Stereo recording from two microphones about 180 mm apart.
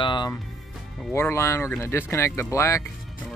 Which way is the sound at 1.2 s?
15° left (ahead or behind).